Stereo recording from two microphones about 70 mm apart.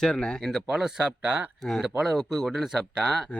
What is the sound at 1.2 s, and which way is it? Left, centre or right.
Speech, right.